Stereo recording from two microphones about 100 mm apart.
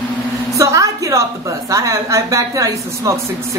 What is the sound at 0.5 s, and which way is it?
A woman's voice, 30° right (ahead or behind).